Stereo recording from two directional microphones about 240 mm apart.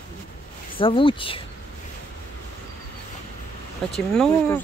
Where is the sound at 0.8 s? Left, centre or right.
Left.